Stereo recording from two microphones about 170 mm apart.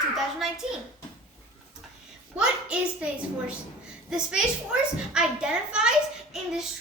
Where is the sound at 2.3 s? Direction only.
5° right (ahead or behind).